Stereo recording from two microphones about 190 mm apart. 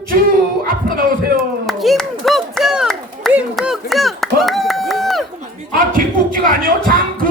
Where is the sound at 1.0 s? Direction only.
50° right (ahead or behind).